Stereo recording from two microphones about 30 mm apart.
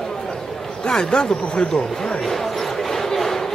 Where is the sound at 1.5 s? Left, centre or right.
Left.